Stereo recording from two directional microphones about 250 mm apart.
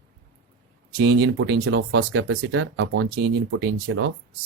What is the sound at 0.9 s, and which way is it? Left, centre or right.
Speech, right.